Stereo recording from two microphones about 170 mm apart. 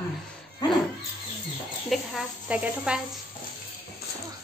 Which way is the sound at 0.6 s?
25° left (ahead or behind).